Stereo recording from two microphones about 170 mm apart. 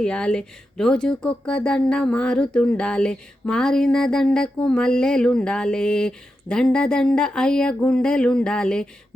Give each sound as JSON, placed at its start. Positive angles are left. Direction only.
{"t": 0.0, "sound": "speech", "side_deg": 5}